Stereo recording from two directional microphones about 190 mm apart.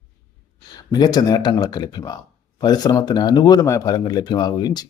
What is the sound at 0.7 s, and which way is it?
Speech, 20° left (ahead or behind).